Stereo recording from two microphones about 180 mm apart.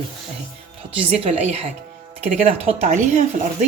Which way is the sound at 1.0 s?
35° right (ahead or behind).